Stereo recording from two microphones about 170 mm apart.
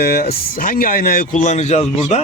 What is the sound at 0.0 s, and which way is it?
Speech, 65° left (ahead or behind).